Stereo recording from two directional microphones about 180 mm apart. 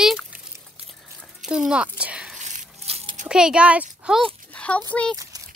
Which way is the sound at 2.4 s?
40° right (ahead or behind).